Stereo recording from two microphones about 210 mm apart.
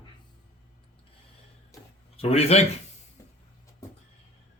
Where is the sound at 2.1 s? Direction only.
30° left (ahead or behind).